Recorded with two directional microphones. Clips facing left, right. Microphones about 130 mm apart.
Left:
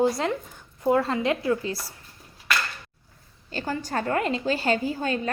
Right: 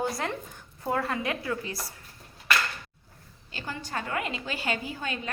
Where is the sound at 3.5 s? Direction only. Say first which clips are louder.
Left 7 dB; 40° left (ahead or behind).